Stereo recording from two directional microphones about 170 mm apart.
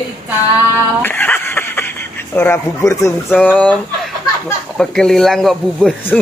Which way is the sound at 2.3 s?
10° left (ahead or behind).